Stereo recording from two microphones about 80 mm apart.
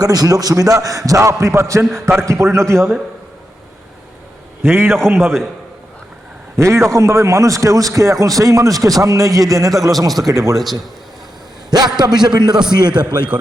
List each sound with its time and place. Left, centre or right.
0.0 s a man's voice: right
4.6 s a man's voice: right
6.6 s a man's voice: right
10.5 s a man's voice: centre
11.7 s a man's voice: right